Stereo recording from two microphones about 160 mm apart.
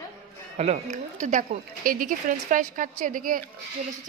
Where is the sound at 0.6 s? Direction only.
40° right (ahead or behind).